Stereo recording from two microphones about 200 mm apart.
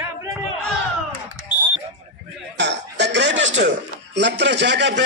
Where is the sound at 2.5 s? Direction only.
60° right (ahead or behind).